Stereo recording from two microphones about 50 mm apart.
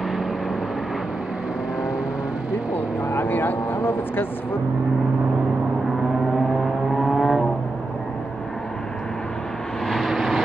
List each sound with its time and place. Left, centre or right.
3.1 s speech: left
7.0 s vehicle: centre
9.8 s vehicle: centre